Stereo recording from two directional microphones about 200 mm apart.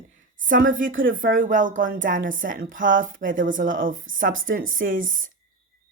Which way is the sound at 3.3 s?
70° right (ahead or behind).